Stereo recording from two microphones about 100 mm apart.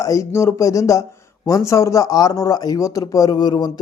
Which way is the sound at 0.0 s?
30° left (ahead or behind).